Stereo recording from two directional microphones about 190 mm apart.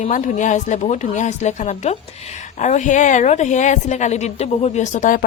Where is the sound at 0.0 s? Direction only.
40° left (ahead or behind).